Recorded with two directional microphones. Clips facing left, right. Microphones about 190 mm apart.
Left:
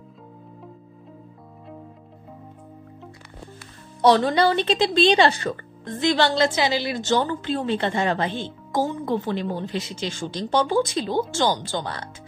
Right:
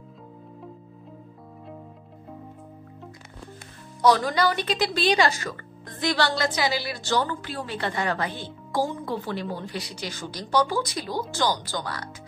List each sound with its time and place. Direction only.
4.0 s a woman's voice: 30° left (ahead or behind)